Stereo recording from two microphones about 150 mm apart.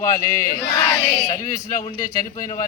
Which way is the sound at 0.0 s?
20° left (ahead or behind).